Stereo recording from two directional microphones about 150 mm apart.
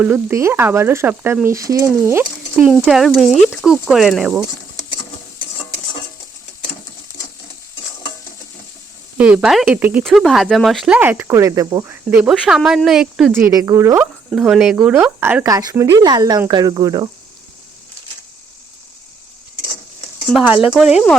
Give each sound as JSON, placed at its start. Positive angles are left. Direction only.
{"t": 0.0, "sound": "speech", "side_deg": -15}
{"t": 2.8, "sound": "speech", "side_deg": 0}
{"t": 9.1, "sound": "speech", "side_deg": -10}
{"t": 10.0, "sound": "speech", "side_deg": 0}
{"t": 12.3, "sound": "speech", "side_deg": -5}
{"t": 13.3, "sound": "speech", "side_deg": -20}
{"t": 14.3, "sound": "speech", "side_deg": -5}
{"t": 15.4, "sound": "speech", "side_deg": -25}
{"t": 20.4, "sound": "speech", "side_deg": -10}